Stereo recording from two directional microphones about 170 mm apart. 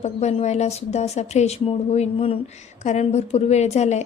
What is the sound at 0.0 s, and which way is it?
Speech, 40° left (ahead or behind).